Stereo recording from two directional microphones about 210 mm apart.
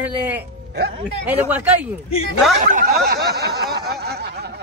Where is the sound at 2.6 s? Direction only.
40° right (ahead or behind).